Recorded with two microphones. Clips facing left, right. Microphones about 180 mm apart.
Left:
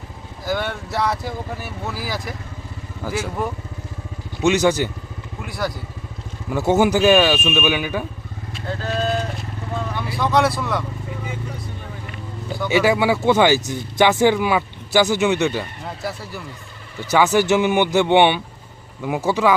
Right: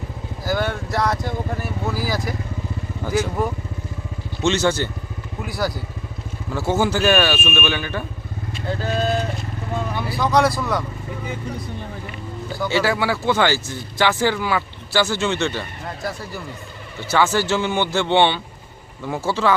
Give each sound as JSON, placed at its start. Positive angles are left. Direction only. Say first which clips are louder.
{"t": 0.4, "sound": "speech", "louder": "right 1 dB", "side_deg": 0}
{"t": 4.4, "sound": "speech", "louder": "left 3 dB", "side_deg": 15}
{"t": 5.5, "sound": "speech", "louder": "right 1 dB", "side_deg": 0}
{"t": 6.5, "sound": "speech", "louder": "left 4 dB", "side_deg": 20}
{"t": 8.8, "sound": "speech", "louder": "even", "side_deg": -5}
{"t": 12.6, "sound": "speech", "louder": "left 3 dB", "side_deg": 15}
{"t": 16.0, "sound": "speech", "louder": "even", "side_deg": 5}
{"t": 17.1, "sound": "speech", "louder": "left 3 dB", "side_deg": 15}